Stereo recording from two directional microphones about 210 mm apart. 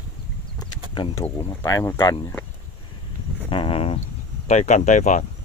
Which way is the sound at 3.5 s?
25° left (ahead or behind).